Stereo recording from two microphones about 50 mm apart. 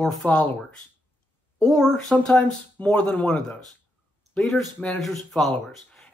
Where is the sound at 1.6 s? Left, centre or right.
Centre.